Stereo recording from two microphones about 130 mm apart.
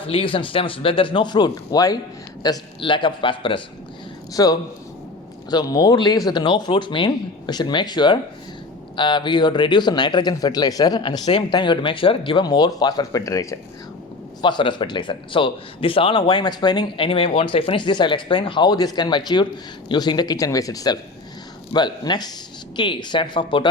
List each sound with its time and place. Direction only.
0.0 s a man's voice: 45° left (ahead or behind); by 13.6 s 25° left (ahead or behind)
14.4 s a man's voice: 35° left (ahead or behind)